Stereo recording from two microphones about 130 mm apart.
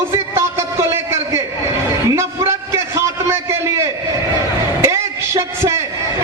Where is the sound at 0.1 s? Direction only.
20° right (ahead or behind).